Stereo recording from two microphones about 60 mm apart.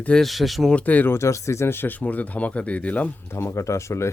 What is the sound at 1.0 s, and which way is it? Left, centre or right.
Speech, left.